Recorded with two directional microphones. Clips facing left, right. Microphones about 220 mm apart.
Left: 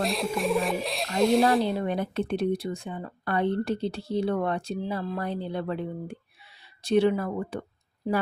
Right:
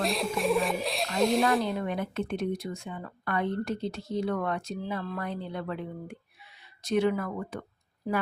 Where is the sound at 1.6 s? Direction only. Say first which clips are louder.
Left 3 dB; 30° left (ahead or behind).